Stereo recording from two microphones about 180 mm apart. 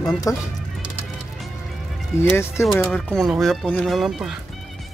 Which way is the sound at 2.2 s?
15° left (ahead or behind).